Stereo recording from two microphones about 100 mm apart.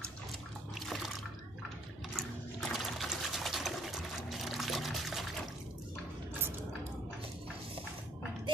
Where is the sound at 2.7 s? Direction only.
Centre (ahead or behind).